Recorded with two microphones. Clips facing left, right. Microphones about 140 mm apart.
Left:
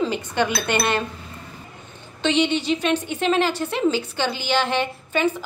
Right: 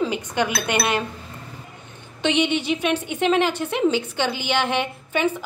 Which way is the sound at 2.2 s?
15° right (ahead or behind).